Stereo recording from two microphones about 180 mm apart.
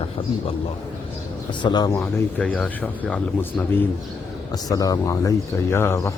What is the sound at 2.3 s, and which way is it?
Speech, 5° left (ahead or behind).